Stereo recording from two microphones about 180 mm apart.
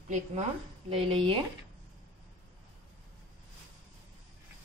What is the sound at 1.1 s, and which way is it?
Speech, 30° right (ahead or behind).